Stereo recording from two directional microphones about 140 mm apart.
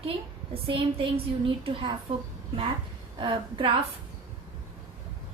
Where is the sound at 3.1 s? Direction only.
35° right (ahead or behind).